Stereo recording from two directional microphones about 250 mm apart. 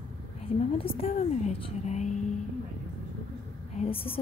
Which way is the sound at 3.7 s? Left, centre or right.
Left.